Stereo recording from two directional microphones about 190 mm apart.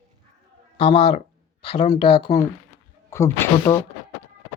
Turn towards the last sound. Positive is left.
turn(degrees=15)  # may be behind; listen again after turning